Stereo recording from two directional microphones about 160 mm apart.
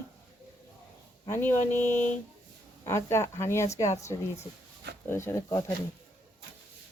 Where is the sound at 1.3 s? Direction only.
10° left (ahead or behind).